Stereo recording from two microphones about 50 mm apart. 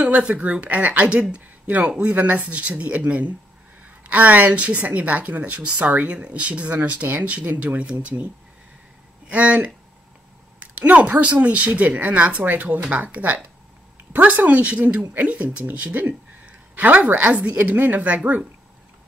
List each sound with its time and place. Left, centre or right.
0.0 s speech: right
9.3 s speech: right
17.7 s speech: right